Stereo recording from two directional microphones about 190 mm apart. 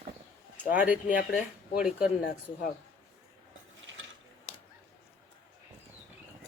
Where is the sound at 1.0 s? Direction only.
45° left (ahead or behind).